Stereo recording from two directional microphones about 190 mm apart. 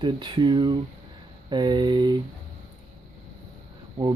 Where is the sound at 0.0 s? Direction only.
25° right (ahead or behind).